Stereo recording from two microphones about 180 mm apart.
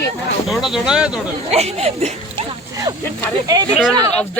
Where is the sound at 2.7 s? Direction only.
20° right (ahead or behind).